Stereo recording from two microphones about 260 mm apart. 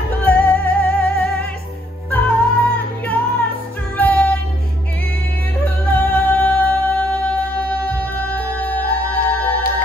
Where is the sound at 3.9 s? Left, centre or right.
Centre.